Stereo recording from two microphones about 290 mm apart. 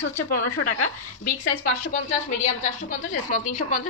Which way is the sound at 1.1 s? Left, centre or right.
Left.